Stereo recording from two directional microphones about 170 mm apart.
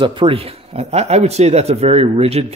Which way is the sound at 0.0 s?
30° right (ahead or behind).